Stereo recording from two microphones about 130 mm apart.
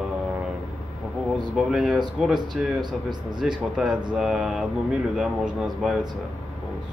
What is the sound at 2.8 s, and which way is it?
Speech, 35° right (ahead or behind).